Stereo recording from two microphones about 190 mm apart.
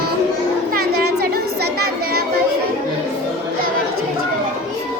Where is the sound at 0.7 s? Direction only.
55° right (ahead or behind).